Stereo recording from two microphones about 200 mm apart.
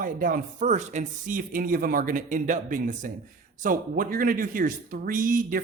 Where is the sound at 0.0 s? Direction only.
45° right (ahead or behind).